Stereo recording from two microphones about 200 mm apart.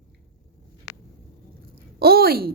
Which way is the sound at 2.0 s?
50° right (ahead or behind).